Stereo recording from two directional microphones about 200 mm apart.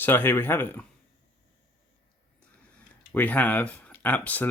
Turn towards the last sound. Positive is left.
turn(degrees=10)  # may be behind; listen again after turning